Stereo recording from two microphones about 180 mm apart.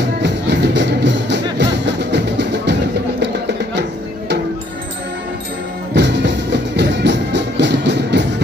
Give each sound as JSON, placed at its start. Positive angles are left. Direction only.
{"t": 0.2, "sound": "music", "side_deg": -75}
{"t": 5.9, "sound": "music", "side_deg": -75}